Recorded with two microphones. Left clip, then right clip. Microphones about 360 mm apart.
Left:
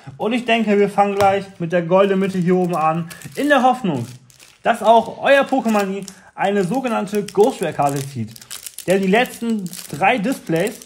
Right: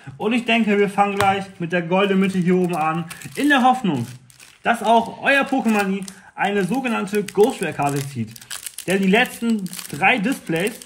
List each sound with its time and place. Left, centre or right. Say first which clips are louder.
0.2 s speech: left 1 dB; left